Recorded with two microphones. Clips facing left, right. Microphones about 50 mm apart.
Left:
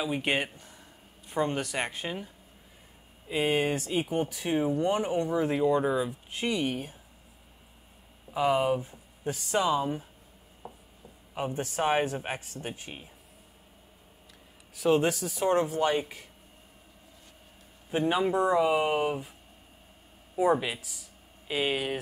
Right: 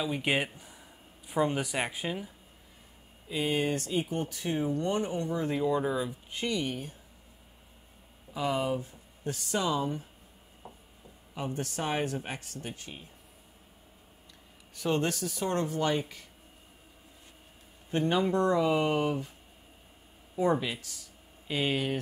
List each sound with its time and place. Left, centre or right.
0.0 s speech: centre
0.6 s a sound: centre
1.3 s speech: centre
3.3 s speech: left
5.6 s speech: centre
6.4 s speech: left
8.3 s speech: left
10.6 s writing: centre
11.3 s speech: centre
14.8 s speech: centre
17.9 s speech: centre
20.3 s speech: centre